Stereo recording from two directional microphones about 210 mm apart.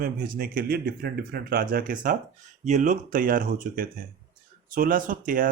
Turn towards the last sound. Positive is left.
turn(degrees=-40)  # may be behind; listen again after turning